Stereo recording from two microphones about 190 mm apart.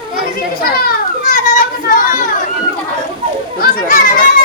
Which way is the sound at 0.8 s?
45° left (ahead or behind).